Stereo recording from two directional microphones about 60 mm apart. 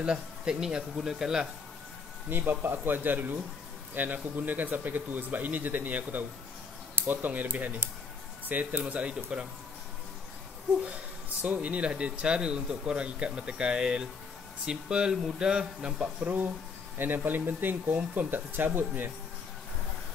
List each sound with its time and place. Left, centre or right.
0.0 s speech: centre
2.2 s speech: right
11.4 s speech: right
17.0 s speech: right